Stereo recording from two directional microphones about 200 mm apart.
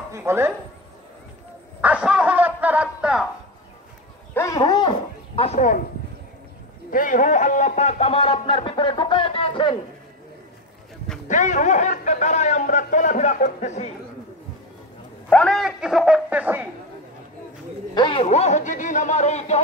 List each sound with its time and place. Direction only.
0.1 s speech: 10° right (ahead or behind)
1.8 s speech: 5° right (ahead or behind)
4.3 s speech: 15° left (ahead or behind); by 5.9 s 40° left (ahead or behind)
6.9 s speech: 40° left (ahead or behind); by 9.8 s 25° left (ahead or behind)
11.2 s speech: 40° left (ahead or behind)
15.2 s speech: 5° left (ahead or behind)
17.9 s speech: 25° left (ahead or behind)